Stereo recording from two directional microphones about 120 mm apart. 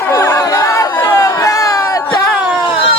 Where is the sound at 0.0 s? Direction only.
25° left (ahead or behind).